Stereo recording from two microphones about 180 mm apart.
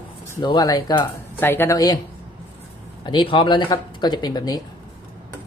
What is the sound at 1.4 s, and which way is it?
Speech, 10° left (ahead or behind).